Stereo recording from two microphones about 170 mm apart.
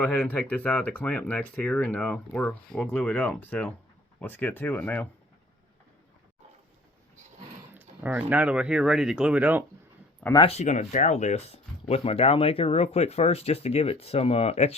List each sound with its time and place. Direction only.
0.0 s speech: 10° left (ahead or behind)
7.7 s speech: 10° right (ahead or behind)
10.4 s speech: 40° left (ahead or behind)